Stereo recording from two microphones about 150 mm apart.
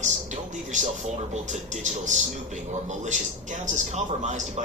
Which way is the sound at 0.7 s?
55° right (ahead or behind).